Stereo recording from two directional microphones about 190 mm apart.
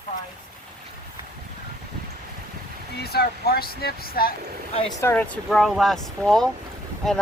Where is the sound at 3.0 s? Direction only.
55° left (ahead or behind).